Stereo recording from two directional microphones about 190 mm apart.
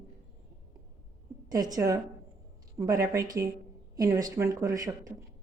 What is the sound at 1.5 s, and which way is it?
A woman's voice, 20° right (ahead or behind).